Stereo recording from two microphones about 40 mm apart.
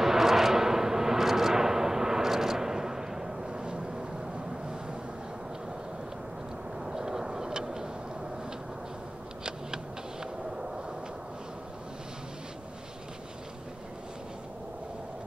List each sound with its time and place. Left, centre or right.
0.0 s vehicle: centre
6.8 s vehicle: centre
10.2 s a sound: centre